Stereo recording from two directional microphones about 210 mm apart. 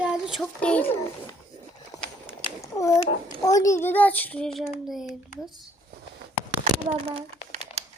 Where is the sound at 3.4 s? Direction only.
15° left (ahead or behind); by 5.1 s centre (ahead or behind).